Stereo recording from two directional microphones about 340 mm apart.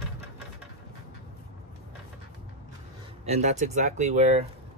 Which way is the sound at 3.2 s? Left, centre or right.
Centre.